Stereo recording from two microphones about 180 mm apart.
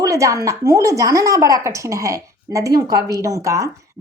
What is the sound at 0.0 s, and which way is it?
A woman's voice, 15° right (ahead or behind).